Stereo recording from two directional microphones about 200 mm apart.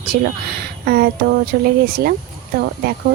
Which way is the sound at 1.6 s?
50° right (ahead or behind).